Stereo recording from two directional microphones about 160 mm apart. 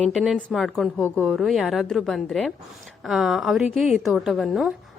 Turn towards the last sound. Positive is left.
turn(degrees=0)  # may be behind; listen again after turning